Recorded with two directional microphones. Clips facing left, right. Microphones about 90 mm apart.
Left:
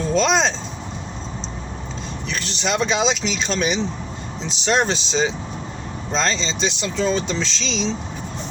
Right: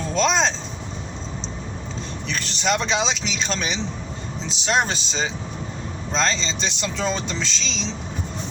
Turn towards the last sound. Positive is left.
turn(degrees=0)  # may be behind; listen again after turning